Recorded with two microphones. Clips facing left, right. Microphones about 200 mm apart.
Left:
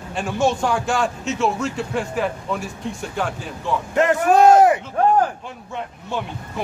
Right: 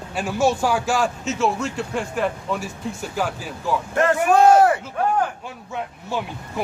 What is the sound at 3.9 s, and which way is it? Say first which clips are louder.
Speech: left 2 dB; 20° left (ahead or behind).